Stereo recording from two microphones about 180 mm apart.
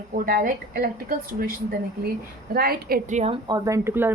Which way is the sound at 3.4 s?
20° right (ahead or behind).